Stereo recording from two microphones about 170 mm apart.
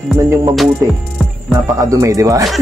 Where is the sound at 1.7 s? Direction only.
20° right (ahead or behind).